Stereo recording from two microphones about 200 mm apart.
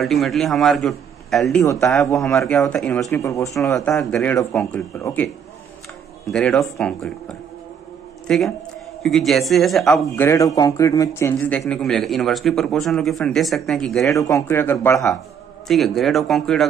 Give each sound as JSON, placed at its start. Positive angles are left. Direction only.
{"t": 0.0, "sound": "a man's voice", "side_deg": 0}
{"t": 1.6, "sound": "speech", "side_deg": 15}
{"t": 2.1, "sound": "a man's voice", "side_deg": 0}
{"t": 3.1, "sound": "a man's voice", "side_deg": 15}
{"t": 8.3, "sound": "a man's voice", "side_deg": 0}
{"t": 10.2, "sound": "a man's voice", "side_deg": 15}
{"t": 14.0, "sound": "speech", "side_deg": 15}
{"t": 15.7, "sound": "a man's voice", "side_deg": 0}